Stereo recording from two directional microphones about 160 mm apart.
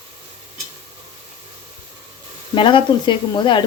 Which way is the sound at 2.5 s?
30° left (ahead or behind).